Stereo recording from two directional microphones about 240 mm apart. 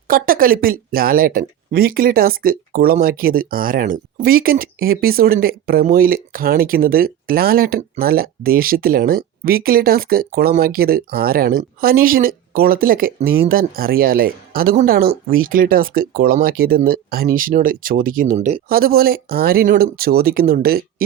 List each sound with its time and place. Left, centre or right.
0.1 s speech: right